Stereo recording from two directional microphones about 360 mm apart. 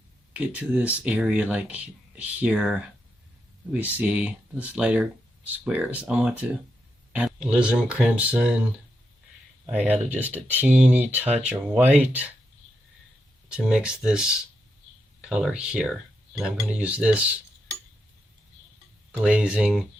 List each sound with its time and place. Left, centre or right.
0.3 s speech: centre
9.7 s speech: centre
13.5 s speech: centre
19.1 s speech: centre